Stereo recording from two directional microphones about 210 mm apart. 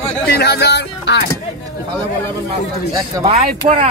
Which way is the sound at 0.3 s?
50° left (ahead or behind).